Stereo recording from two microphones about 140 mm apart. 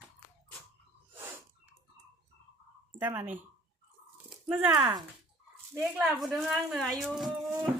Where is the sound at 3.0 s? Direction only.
15° right (ahead or behind).